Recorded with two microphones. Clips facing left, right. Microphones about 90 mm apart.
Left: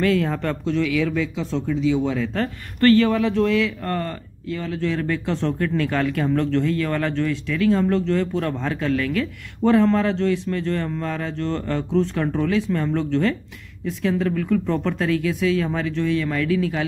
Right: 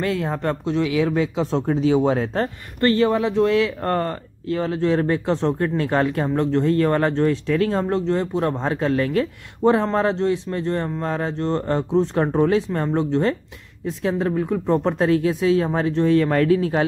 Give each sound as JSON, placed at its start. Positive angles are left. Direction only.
{"t": 0.0, "sound": "speech", "side_deg": -20}
{"t": 3.4, "sound": "speech", "side_deg": -35}
{"t": 6.7, "sound": "speech", "side_deg": -35}